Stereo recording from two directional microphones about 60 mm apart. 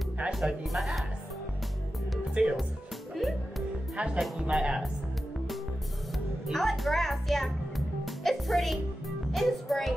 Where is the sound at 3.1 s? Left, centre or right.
Centre.